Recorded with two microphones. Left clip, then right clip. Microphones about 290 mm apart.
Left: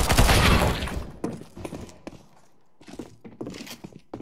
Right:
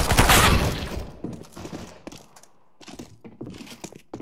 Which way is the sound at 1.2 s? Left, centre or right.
Left.